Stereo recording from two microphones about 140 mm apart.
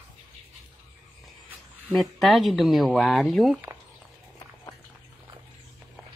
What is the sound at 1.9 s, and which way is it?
Speech, centre (ahead or behind).